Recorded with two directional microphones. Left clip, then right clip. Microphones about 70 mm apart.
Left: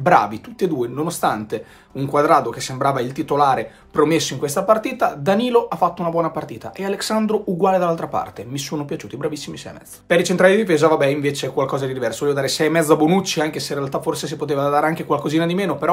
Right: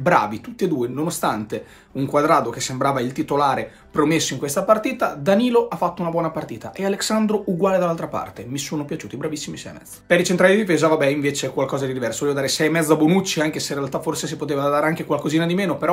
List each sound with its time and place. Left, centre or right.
0.0 s speech: left
7.6 s speech: left
13.5 s speech: left